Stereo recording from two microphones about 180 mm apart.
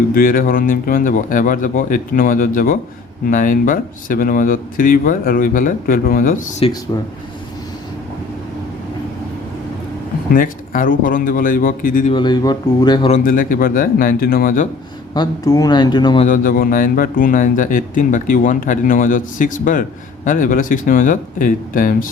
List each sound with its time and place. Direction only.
0.1 s speech: 50° left (ahead or behind)
6.6 s speech: 30° left (ahead or behind)
10.3 s speech: 50° left (ahead or behind)
12.1 s speech: 25° left (ahead or behind)
13.1 s speech: 45° left (ahead or behind)
15.1 s speech: 20° left (ahead or behind)
16.2 s speech: 50° left (ahead or behind)